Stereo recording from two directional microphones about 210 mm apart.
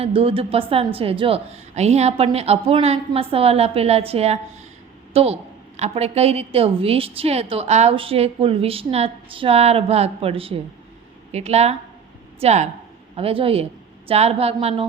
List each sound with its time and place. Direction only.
0.0 s a woman's voice: 25° right (ahead or behind)